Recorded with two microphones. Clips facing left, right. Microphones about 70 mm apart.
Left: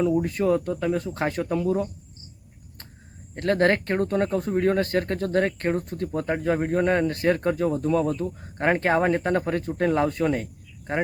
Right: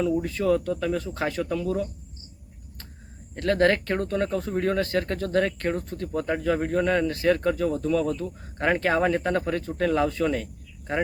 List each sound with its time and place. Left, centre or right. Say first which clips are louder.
0.0 s speech: left 2 dB; left
3.3 s speech: even; left